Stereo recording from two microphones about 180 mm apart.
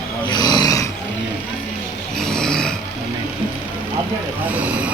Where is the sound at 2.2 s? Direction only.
5° left (ahead or behind).